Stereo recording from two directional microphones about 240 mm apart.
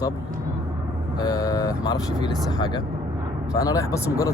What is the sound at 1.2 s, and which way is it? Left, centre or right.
Speech, centre.